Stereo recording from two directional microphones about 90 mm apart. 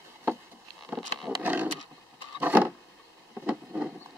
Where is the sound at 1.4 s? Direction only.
20° right (ahead or behind).